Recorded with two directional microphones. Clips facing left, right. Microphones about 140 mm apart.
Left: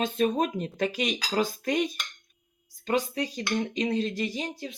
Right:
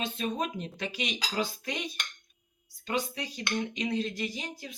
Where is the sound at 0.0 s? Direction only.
45° left (ahead or behind).